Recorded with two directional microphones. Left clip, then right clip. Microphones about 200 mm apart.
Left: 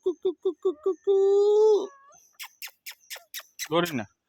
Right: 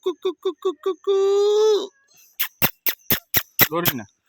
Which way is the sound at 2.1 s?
5° right (ahead or behind).